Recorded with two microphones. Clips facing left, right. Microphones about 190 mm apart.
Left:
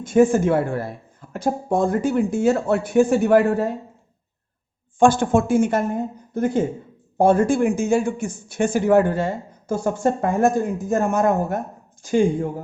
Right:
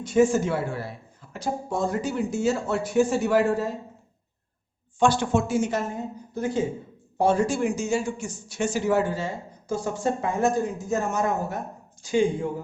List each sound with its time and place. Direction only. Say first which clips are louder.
0.0 s speech: left 4 dB; 55° left (ahead or behind)
4.9 s a man's voice: left 5 dB; 50° left (ahead or behind)